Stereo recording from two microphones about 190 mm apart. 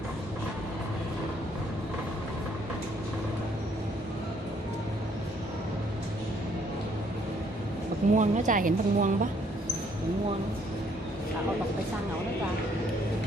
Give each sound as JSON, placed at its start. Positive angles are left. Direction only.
{"t": 8.1, "sound": "speech", "side_deg": -40}